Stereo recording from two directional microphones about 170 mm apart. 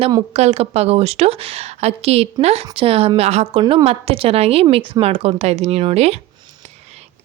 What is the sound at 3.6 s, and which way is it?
Speech, 25° right (ahead or behind).